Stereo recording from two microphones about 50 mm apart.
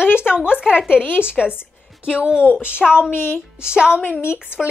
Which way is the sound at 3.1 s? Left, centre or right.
Left.